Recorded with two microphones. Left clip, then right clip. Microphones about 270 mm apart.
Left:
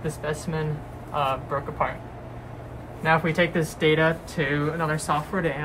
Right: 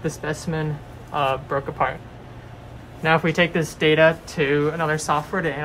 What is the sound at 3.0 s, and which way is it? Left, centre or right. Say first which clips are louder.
Speech: right 3 dB; right.